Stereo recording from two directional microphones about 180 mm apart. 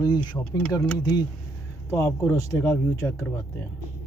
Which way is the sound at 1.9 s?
15° left (ahead or behind).